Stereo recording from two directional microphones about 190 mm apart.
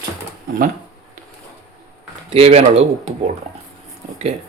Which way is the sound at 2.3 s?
35° right (ahead or behind).